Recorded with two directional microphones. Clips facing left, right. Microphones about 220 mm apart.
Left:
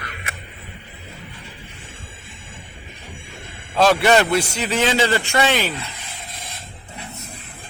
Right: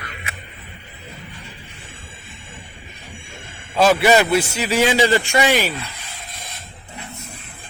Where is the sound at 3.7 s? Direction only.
5° right (ahead or behind).